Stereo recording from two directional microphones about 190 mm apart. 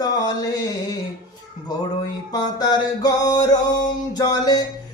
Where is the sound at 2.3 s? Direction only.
20° left (ahead or behind).